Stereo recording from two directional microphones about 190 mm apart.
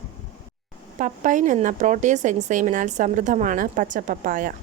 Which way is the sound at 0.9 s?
45° right (ahead or behind).